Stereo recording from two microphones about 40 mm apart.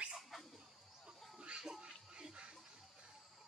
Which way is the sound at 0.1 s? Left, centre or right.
Centre.